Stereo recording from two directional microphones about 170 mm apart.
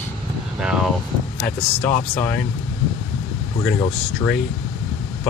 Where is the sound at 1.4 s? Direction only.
10° left (ahead or behind).